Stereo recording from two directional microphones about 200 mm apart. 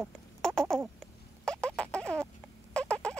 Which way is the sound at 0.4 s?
5° left (ahead or behind).